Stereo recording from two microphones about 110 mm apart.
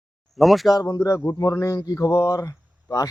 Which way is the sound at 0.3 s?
Centre (ahead or behind).